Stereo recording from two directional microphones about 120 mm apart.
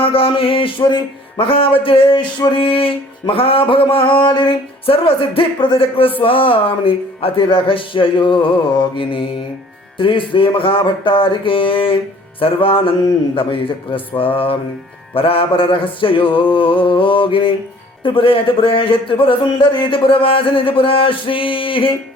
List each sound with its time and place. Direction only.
0.0 s speech: 50° left (ahead or behind)